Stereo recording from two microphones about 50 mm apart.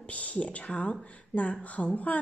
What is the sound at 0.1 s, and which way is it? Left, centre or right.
A woman's voice, left.